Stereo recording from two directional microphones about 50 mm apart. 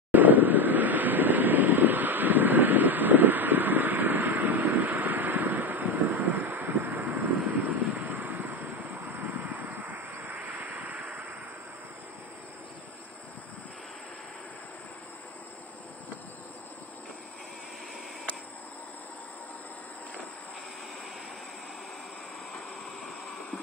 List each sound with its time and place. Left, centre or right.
0.1 s vehicle: right